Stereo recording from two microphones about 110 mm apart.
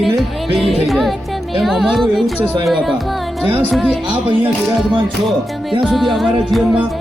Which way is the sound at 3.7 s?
Centre (ahead or behind).